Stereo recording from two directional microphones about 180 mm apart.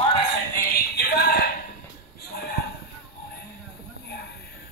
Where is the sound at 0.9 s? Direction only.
60° left (ahead or behind).